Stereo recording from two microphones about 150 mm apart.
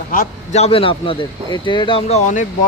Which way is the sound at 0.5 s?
40° left (ahead or behind).